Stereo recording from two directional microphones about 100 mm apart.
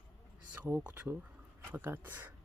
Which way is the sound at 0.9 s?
20° right (ahead or behind).